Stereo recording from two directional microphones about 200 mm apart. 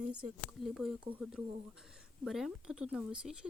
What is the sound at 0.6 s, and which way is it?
Speech, centre (ahead or behind).